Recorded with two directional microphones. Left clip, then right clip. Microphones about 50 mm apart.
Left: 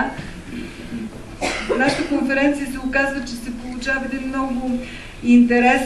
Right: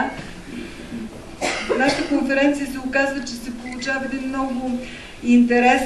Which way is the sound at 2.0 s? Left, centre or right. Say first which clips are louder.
Even; centre.